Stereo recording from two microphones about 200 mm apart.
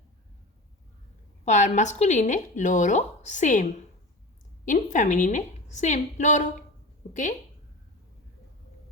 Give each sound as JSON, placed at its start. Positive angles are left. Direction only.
{"t": 1.5, "sound": "speech", "side_deg": 35}